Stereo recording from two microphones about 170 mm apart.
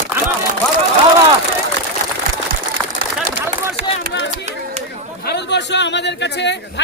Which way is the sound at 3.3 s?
75° right (ahead or behind).